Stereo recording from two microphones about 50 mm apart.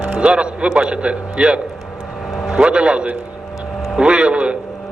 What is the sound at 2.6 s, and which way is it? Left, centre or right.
Speech, right.